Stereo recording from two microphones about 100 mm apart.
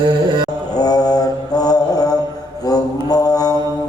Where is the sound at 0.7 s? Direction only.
40° left (ahead or behind).